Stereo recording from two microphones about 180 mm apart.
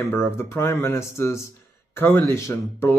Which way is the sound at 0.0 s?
15° left (ahead or behind).